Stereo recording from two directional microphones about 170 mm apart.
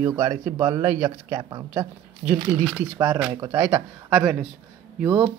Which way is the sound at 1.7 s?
10° right (ahead or behind).